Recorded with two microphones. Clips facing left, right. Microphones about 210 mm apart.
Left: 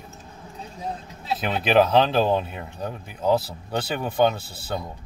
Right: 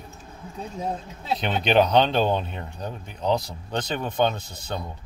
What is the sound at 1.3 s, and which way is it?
Speech, 5° left (ahead or behind).